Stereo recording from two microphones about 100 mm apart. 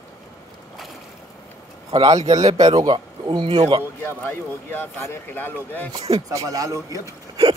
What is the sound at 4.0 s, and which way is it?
Speech, 20° left (ahead or behind).